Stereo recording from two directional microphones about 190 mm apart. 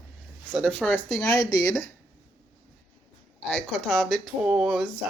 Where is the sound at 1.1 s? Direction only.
15° left (ahead or behind).